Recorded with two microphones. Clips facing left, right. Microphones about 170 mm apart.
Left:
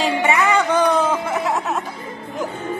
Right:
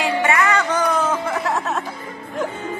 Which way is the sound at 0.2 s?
20° left (ahead or behind).